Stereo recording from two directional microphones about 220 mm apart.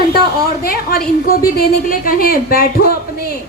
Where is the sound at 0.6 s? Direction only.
45° left (ahead or behind).